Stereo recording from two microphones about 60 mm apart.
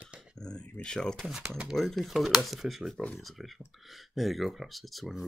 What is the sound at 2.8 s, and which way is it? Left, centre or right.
Speech, centre.